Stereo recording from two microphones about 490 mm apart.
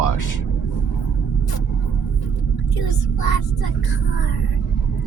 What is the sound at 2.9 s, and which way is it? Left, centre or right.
Speech, left.